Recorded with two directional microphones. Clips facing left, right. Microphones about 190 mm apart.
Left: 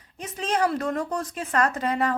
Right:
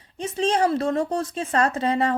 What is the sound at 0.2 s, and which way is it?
A woman's voice, 30° right (ahead or behind).